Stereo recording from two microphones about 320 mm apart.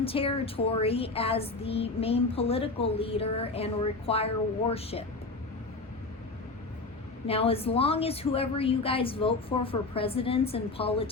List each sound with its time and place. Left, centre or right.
0.0 s speech: centre
7.3 s speech: centre